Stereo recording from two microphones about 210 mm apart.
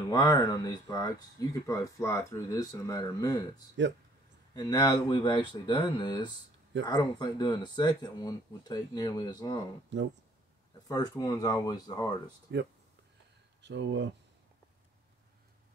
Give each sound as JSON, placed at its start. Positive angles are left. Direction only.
{"t": 0.1, "sound": "speech", "side_deg": 20}
{"t": 9.9, "sound": "speech", "side_deg": -60}
{"t": 10.9, "sound": "speech", "side_deg": 15}
{"t": 12.5, "sound": "speech", "side_deg": -55}